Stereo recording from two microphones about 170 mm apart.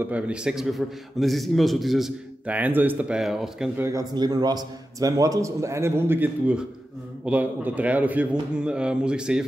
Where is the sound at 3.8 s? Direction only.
20° right (ahead or behind).